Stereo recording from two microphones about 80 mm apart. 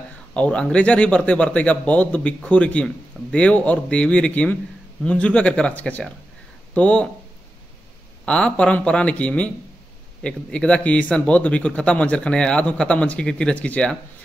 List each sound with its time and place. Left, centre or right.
0.3 s speech: centre
8.3 s speech: centre